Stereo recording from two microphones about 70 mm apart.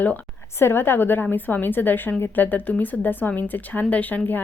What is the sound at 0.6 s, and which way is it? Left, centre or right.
A woman's voice, left.